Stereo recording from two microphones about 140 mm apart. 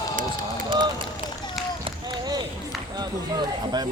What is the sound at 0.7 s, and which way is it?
Run, 35° right (ahead or behind).